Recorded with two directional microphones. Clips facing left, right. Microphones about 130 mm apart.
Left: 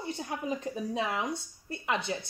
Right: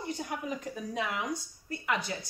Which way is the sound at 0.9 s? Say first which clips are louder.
Even; 30° left (ahead or behind).